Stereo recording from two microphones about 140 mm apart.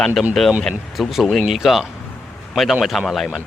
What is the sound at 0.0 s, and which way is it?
Speech, centre (ahead or behind).